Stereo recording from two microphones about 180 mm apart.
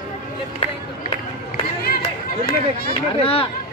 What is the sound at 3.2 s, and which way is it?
Speech, 30° left (ahead or behind).